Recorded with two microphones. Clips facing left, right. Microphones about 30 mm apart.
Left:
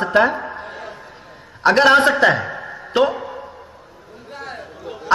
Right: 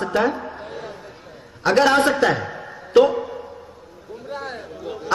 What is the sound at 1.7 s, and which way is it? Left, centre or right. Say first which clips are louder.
Speech: left 3 dB; left.